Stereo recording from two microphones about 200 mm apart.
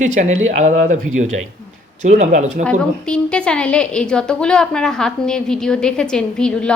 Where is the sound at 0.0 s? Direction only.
35° right (ahead or behind).